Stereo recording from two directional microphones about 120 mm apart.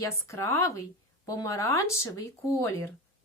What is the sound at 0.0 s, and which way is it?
A woman's voice, 25° left (ahead or behind).